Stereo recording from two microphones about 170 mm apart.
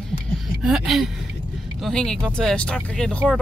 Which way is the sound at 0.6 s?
5° right (ahead or behind).